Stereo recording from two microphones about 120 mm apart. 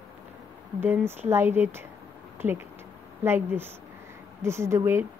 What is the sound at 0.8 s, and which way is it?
Speech, 20° right (ahead or behind).